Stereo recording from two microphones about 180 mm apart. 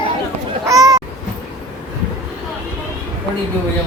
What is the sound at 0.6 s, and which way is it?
Speech, 20° right (ahead or behind).